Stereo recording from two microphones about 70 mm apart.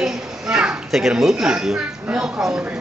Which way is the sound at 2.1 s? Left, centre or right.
Centre.